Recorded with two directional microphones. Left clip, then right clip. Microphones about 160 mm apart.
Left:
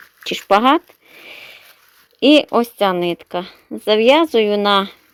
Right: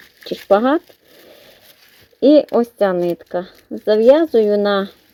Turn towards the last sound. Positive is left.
turn(degrees=30)  # may be behind; listen again after turning